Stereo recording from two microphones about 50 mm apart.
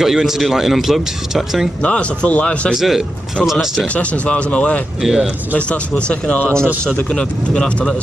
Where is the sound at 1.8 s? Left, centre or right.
Left.